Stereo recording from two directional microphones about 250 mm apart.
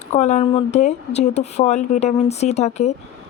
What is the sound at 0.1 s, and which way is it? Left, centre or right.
Speech, left.